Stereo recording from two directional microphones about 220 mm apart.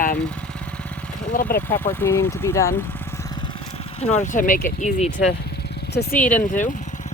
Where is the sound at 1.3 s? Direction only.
35° left (ahead or behind).